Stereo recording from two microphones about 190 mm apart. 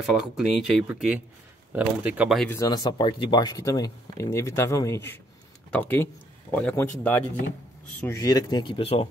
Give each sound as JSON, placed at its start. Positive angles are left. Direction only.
{"t": 0.0, "sound": "speech", "side_deg": 0}
{"t": 2.5, "sound": "speech", "side_deg": 20}